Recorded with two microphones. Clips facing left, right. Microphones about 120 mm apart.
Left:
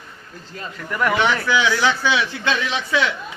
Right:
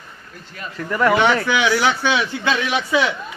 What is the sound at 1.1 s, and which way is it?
Speech, 20° right (ahead or behind).